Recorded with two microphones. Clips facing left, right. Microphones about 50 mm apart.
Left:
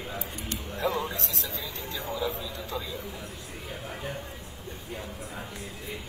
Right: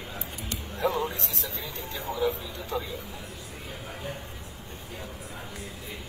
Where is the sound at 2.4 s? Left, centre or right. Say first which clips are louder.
Right 2 dB; right.